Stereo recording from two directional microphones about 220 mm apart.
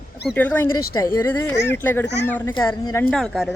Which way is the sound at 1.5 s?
50° left (ahead or behind).